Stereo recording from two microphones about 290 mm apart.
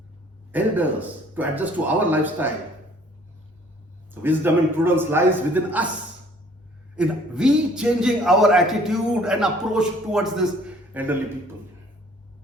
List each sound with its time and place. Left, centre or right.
0.5 s a man's voice: centre
4.1 s a man's voice: centre
6.9 s a man's voice: centre